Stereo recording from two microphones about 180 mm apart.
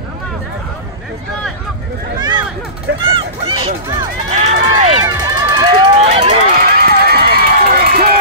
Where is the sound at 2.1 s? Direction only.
25° right (ahead or behind).